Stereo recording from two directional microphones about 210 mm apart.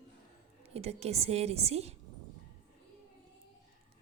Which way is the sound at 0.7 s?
30° right (ahead or behind).